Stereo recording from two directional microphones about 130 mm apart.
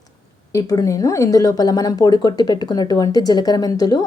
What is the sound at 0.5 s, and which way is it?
Speech, 25° left (ahead or behind).